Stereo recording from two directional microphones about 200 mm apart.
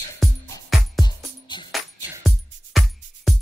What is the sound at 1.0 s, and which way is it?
Music, 20° left (ahead or behind).